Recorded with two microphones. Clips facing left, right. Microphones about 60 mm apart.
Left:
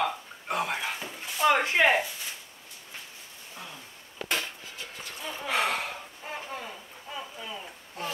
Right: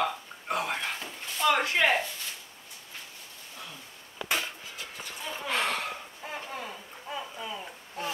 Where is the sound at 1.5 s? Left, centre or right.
Left.